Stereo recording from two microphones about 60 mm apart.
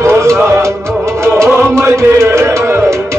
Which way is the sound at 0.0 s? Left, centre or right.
Right.